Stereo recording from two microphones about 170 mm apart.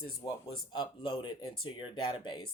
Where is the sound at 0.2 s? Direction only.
25° left (ahead or behind).